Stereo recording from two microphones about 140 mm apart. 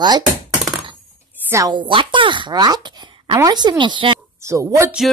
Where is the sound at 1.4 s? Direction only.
20° right (ahead or behind).